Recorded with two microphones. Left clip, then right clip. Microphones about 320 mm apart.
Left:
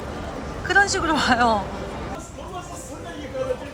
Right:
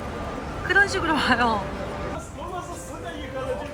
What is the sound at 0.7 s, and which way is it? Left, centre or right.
Speech, centre.